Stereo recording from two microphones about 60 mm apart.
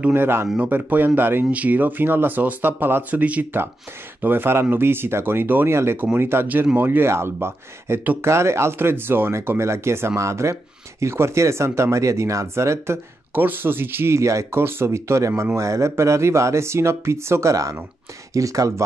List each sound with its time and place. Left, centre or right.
0.1 s speech: right
4.2 s speech: right
6.4 s speech: right
14.1 s speech: right
14.6 s speech: right